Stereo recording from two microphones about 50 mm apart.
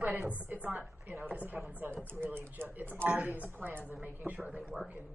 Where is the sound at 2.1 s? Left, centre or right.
Right.